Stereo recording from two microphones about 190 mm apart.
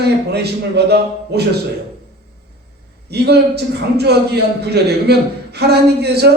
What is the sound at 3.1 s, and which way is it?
A man's voice, 60° right (ahead or behind).